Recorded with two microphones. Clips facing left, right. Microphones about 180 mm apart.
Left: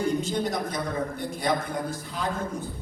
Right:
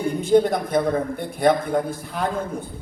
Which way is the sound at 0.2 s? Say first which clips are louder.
Right 10 dB; 55° right (ahead or behind).